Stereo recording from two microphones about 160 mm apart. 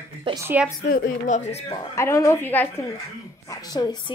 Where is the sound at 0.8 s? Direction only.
65° left (ahead or behind).